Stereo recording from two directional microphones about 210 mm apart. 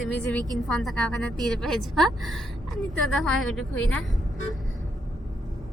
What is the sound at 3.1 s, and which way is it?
Speech, centre (ahead or behind).